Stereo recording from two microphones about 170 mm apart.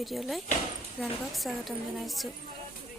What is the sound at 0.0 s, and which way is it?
A woman's voice, centre (ahead or behind).